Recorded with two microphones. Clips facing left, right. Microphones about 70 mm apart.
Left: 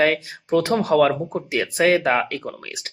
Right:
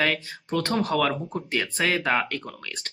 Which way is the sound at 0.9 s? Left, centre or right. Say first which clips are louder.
Left 7 dB; left.